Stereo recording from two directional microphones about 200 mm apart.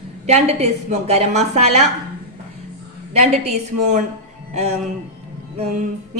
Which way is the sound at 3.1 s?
35° right (ahead or behind).